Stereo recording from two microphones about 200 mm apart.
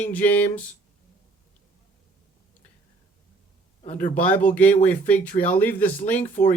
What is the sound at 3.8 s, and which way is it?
Speech, 35° left (ahead or behind).